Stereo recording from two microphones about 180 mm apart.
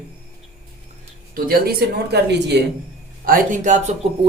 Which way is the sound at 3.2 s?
50° right (ahead or behind).